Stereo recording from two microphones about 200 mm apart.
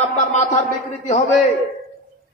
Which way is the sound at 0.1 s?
35° left (ahead or behind).